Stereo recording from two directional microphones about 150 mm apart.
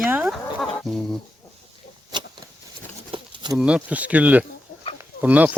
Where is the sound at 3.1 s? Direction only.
30° right (ahead or behind).